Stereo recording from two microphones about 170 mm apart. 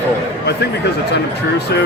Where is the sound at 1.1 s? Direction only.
75° left (ahead or behind).